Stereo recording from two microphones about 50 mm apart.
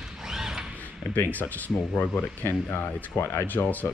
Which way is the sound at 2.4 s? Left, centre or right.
Left.